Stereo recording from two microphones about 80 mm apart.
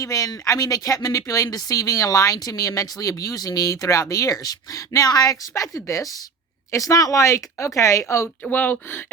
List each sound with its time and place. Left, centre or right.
0.0 s speech: left
8.4 s speech: left